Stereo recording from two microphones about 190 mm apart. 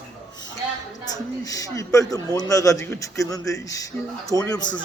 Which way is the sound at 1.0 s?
20° left (ahead or behind).